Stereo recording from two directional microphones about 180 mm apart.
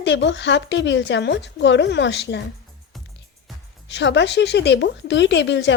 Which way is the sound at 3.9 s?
75° left (ahead or behind).